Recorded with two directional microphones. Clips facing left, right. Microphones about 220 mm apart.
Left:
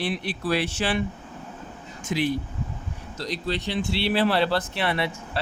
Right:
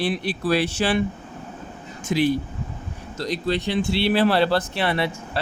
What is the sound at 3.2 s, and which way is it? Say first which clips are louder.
Speech: right 5 dB; 50° right (ahead or behind).